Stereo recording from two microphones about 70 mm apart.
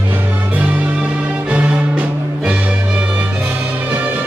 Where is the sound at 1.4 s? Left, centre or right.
Centre.